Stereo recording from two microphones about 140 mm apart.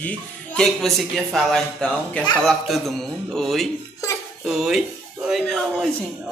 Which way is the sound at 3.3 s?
Centre (ahead or behind).